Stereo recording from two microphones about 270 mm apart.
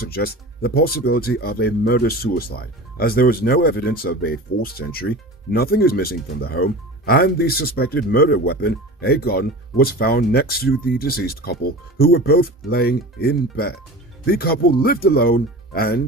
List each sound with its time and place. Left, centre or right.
0.0 s speech: left